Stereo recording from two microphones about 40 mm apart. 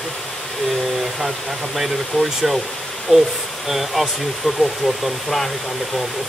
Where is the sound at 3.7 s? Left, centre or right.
Centre.